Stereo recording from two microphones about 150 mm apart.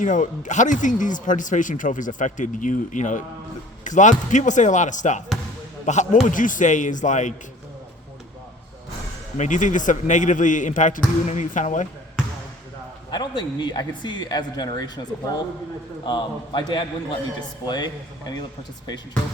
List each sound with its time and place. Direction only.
0.0 s a man's voice: 55° left (ahead or behind)
9.4 s speech: 55° left (ahead or behind)
13.1 s speech: 30° left (ahead or behind)
16.0 s a man's voice: 30° left (ahead or behind)